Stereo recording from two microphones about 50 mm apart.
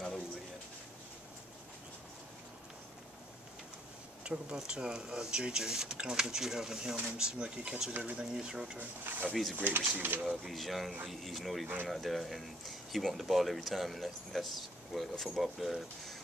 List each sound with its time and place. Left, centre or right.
4.2 s speech: centre
8.7 s speech: right
9.3 s speech: centre
9.7 s speech: right
10.2 s speech: centre
11.6 s speech: right
11.9 s speech: centre